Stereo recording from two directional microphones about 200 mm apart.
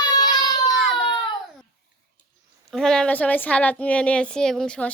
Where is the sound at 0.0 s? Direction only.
20° left (ahead or behind).